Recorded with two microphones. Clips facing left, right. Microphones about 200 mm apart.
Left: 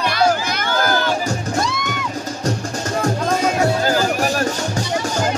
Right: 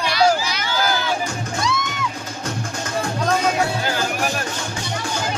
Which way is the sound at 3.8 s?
40° left (ahead or behind).